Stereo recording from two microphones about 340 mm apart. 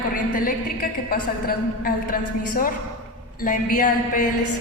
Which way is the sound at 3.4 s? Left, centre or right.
Left.